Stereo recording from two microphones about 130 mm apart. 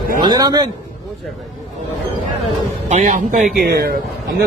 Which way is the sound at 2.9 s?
70° right (ahead or behind).